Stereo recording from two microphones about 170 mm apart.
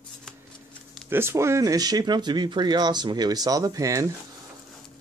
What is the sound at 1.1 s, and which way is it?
Speech, 15° right (ahead or behind).